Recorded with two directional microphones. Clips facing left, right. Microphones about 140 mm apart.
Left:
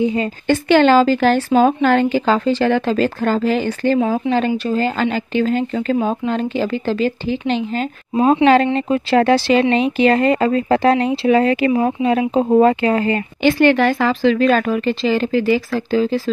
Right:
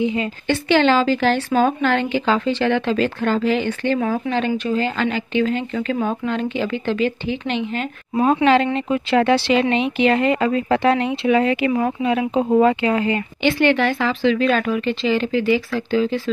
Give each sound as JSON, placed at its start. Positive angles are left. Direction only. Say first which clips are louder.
{"t": 0.0, "sound": "speech", "louder": "left 3 dB", "side_deg": 40}
{"t": 8.7, "sound": "speech", "louder": "left 3 dB", "side_deg": 40}